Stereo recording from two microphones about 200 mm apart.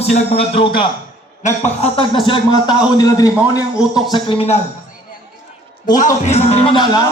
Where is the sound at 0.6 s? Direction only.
30° left (ahead or behind).